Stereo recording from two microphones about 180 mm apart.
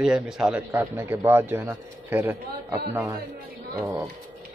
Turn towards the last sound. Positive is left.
turn(degrees=-15)  # may be behind; listen again after turning